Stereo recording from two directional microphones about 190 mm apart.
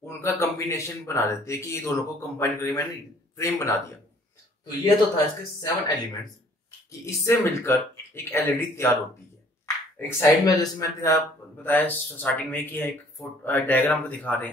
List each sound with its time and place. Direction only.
0.0 s a man's voice: 15° left (ahead or behind)
7.1 s a man's voice: 15° left (ahead or behind)
9.9 s a man's voice: 20° left (ahead or behind)